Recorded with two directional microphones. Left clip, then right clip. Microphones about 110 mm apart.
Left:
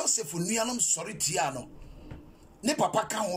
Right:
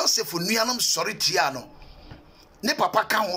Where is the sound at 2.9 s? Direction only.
30° left (ahead or behind).